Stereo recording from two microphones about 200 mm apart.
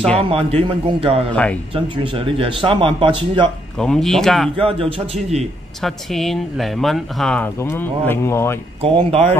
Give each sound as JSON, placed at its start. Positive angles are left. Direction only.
{"t": 0.2, "sound": "speech", "side_deg": -30}
{"t": 1.3, "sound": "speech", "side_deg": 5}
{"t": 1.7, "sound": "speech", "side_deg": -25}
{"t": 3.7, "sound": "speech", "side_deg": 5}
{"t": 4.6, "sound": "speech", "side_deg": -30}
{"t": 5.8, "sound": "speech", "side_deg": 0}
{"t": 8.8, "sound": "speech", "side_deg": -30}